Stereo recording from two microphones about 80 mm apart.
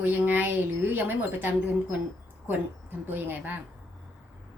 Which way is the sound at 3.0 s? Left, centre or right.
Right.